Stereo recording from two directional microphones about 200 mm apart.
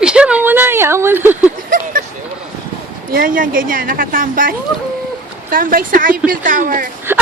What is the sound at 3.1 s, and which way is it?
A woman's voice, 45° right (ahead or behind).